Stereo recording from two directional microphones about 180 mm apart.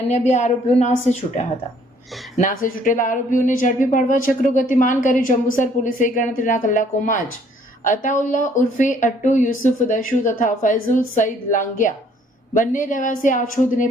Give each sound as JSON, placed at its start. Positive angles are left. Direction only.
{"t": 0.1, "sound": "a woman's voice", "side_deg": 40}
{"t": 2.4, "sound": "a woman's voice", "side_deg": 50}